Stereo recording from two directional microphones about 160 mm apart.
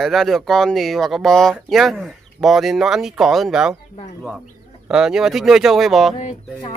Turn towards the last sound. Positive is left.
turn(degrees=35)  # may be behind; listen again after turning